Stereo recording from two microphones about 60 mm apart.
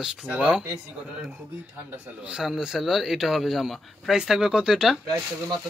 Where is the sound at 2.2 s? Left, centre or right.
Centre.